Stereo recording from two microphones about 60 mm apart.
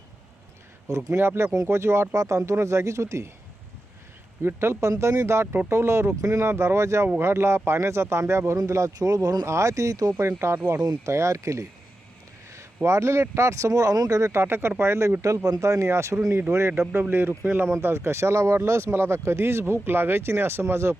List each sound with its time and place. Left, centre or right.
0.9 s speech: right
1.1 s speech: right
2.1 s speech: right
4.4 s speech: right
9.0 s speech: right
9.5 s speech: right
10.4 s speech: right
10.8 s speech: right
12.5 s a sound: right
13.3 s speech: right
14.3 s speech: right
15.4 s speech: right
19.8 s speech: right